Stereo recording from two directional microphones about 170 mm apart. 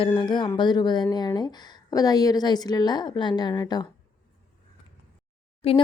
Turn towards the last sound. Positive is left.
turn(degrees=35)  # may be behind; listen again after turning